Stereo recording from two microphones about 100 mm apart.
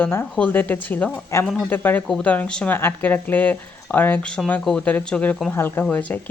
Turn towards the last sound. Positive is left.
turn(degrees=15)  # may be behind; listen again after turning